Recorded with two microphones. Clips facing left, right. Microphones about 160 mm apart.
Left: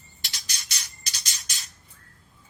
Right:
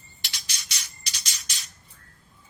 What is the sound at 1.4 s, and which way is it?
Squawk, 40° left (ahead or behind).